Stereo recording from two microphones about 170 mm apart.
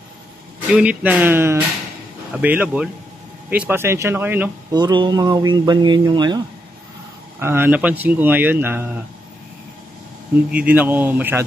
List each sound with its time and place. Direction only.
0.7 s speech: 10° right (ahead or behind)
4.7 s speech: 25° right (ahead or behind)
7.3 s speech: 15° right (ahead or behind)
10.5 s speech: 10° right (ahead or behind)